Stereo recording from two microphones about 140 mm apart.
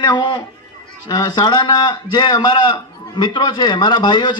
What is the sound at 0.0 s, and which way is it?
A man's voice, 35° left (ahead or behind).